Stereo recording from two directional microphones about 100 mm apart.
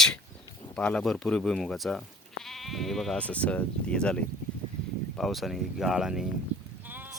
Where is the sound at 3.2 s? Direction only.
15° left (ahead or behind); by 6.3 s 5° right (ahead or behind).